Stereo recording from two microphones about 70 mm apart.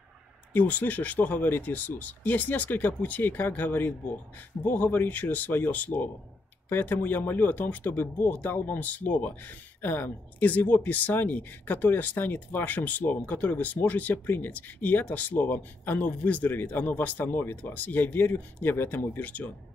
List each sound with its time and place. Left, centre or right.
0.5 s speech: left